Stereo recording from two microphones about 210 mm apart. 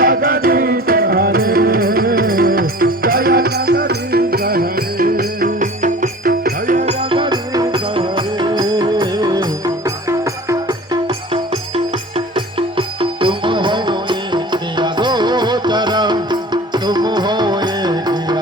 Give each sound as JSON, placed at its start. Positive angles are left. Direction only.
{"t": 0.0, "sound": "music", "side_deg": -45}